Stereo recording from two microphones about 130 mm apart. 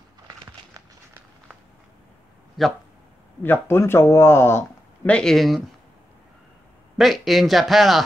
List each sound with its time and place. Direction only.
2.6 s speech: centre (ahead or behind)
3.4 s speech: 15° left (ahead or behind)
5.1 s a man's voice: 5° left (ahead or behind)
7.0 s a man's voice: centre (ahead or behind)